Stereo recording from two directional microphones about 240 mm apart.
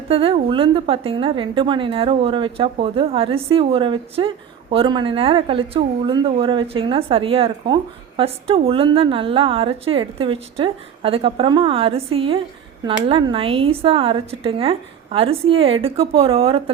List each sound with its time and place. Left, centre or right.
0.1 s speech: right